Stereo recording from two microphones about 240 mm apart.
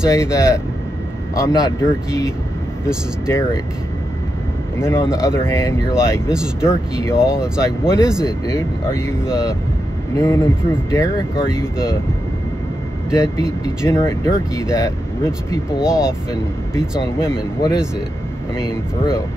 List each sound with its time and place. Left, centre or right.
0.0 s speech: centre
4.7 s speech: centre
7.2 s speech: centre
8.2 s speech: centre
13.1 s speech: centre
15.8 s speech: centre
17.6 s speech: centre